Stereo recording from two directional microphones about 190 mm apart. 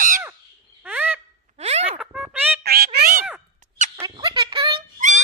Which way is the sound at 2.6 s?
55° right (ahead or behind).